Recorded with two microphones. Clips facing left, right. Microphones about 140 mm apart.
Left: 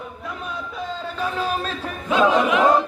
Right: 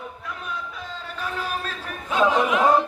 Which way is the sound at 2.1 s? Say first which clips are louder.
Left 3 dB; 90° left.